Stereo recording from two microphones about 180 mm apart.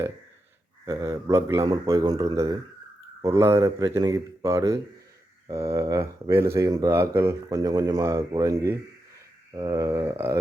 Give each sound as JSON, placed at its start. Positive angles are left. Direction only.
{"t": 0.9, "sound": "speech", "side_deg": -15}